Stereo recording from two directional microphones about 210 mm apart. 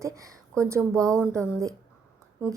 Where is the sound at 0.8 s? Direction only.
5° left (ahead or behind).